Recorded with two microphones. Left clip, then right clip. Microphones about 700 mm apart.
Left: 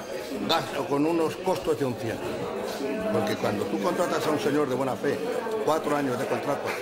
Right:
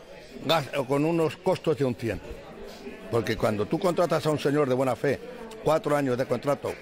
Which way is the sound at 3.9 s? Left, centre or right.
Right.